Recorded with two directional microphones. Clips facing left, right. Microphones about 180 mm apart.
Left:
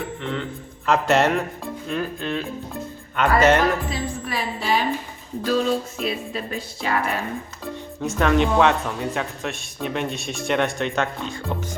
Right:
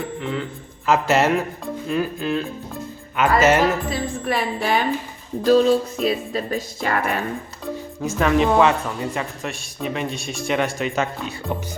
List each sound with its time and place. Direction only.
0.2 s speech: 5° right (ahead or behind)
4.3 s a woman's voice: 55° right (ahead or behind)
5.5 s speech: 40° right (ahead or behind)
8.0 s speech: centre (ahead or behind)